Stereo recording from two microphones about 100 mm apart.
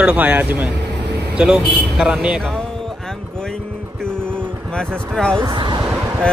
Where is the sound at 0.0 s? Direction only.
15° right (ahead or behind).